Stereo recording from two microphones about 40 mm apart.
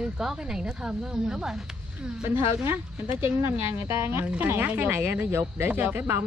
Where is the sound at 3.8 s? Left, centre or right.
Right.